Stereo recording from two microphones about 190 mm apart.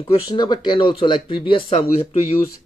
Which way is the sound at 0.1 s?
20° left (ahead or behind).